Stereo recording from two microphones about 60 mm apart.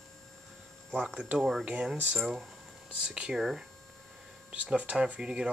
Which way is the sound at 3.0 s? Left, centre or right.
Centre.